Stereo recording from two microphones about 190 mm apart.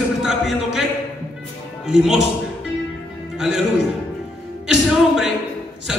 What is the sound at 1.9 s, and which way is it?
Speech, centre (ahead or behind).